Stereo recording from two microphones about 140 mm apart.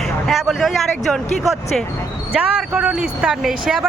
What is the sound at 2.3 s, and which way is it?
Speech, 5° right (ahead or behind).